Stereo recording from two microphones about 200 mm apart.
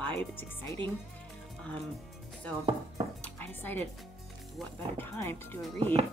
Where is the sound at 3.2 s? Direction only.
10° left (ahead or behind).